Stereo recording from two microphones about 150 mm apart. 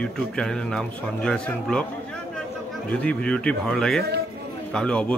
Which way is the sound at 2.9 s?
10° left (ahead or behind).